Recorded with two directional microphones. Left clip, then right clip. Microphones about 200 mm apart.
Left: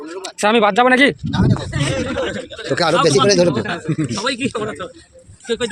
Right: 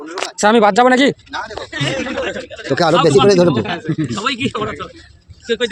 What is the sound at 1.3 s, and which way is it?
Speech, 15° left (ahead or behind).